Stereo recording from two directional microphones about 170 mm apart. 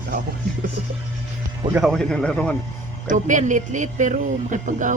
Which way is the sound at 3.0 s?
45° right (ahead or behind).